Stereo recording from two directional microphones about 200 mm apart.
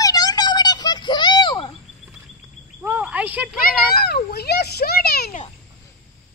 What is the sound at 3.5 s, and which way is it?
A child's voice, 50° left (ahead or behind).